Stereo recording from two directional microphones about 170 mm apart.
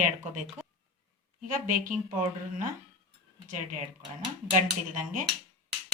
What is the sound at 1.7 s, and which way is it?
Speech, 50° right (ahead or behind).